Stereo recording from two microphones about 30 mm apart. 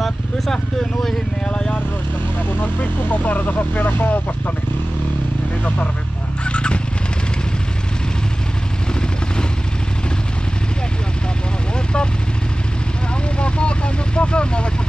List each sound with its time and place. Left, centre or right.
2.6 s speech: left
6.4 s fowl: left
13.4 s vehicle: left